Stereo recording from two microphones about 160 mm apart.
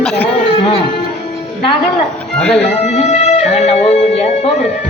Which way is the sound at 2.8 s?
45° left (ahead or behind).